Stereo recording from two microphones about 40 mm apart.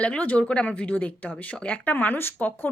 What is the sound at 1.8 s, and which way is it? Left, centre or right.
Speech, left.